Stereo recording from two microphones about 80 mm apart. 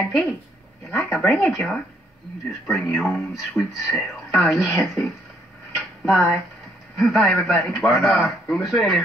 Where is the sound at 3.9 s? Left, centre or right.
Centre.